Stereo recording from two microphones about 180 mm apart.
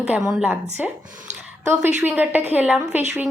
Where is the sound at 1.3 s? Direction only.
40° right (ahead or behind).